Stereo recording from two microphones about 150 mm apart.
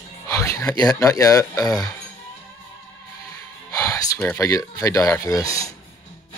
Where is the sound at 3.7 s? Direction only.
20° left (ahead or behind).